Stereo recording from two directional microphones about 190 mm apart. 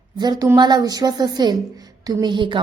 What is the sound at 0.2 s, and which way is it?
A woman's voice, 20° right (ahead or behind).